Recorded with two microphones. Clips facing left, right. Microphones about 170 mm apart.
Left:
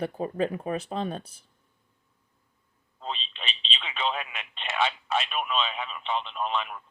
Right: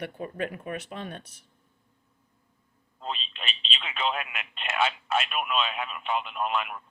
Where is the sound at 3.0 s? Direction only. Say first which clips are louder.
Even; 5° right (ahead or behind).